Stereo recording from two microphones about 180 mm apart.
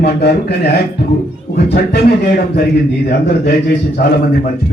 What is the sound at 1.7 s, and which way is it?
Speech, 60° left (ahead or behind).